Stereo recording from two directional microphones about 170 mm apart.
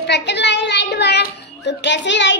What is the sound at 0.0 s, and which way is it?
A child's voice, 85° left.